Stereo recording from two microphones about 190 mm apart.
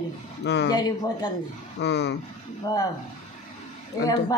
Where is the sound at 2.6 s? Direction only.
20° left (ahead or behind).